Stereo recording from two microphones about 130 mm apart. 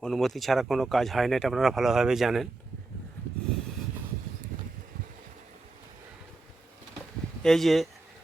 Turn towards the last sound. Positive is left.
turn(degrees=0)  # may be behind; listen again after turning